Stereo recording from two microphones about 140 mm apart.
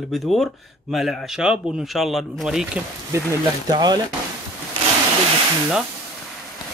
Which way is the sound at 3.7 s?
30° right (ahead or behind).